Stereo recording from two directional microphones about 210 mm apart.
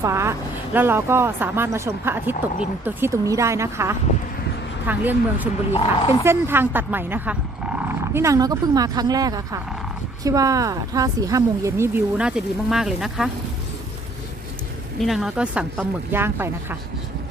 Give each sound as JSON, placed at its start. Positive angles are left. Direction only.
{"t": 0.0, "sound": "speech", "side_deg": -15}
{"t": 5.7, "sound": "speech", "side_deg": 25}
{"t": 6.2, "sound": "speech", "side_deg": -10}
{"t": 15.0, "sound": "speech", "side_deg": 0}